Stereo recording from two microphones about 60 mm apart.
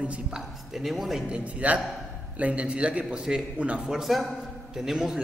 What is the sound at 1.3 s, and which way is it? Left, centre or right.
A man's voice, centre.